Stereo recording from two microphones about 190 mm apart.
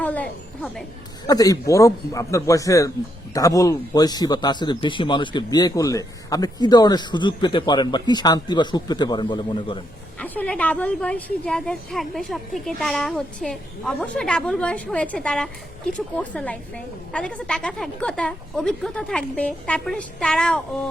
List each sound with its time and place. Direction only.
0.0 s a sound: 10° left (ahead or behind)
1.3 s a man's voice: 20° left (ahead or behind)
10.2 s a woman's voice: 10° left (ahead or behind)